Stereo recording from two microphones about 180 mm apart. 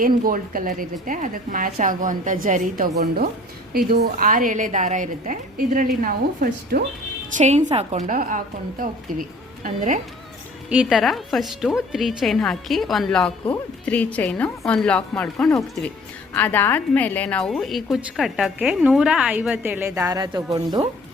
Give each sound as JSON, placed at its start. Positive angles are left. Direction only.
{"t": 0.0, "sound": "a woman's voice", "side_deg": -50}
{"t": 7.3, "sound": "a woman's voice", "side_deg": -40}
{"t": 9.6, "sound": "a woman's voice", "side_deg": -45}
{"t": 10.7, "sound": "a woman's voice", "side_deg": -5}